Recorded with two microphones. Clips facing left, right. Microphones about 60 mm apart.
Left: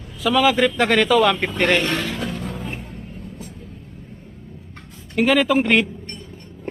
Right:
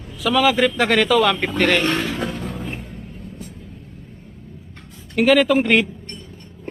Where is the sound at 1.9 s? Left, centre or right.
Right.